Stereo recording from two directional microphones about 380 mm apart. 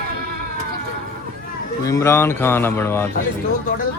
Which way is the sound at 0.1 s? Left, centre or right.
Right.